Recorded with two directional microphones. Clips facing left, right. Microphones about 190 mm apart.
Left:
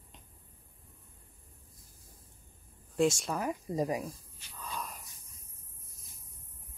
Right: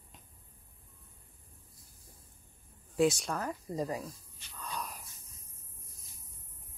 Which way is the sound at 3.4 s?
15° left (ahead or behind).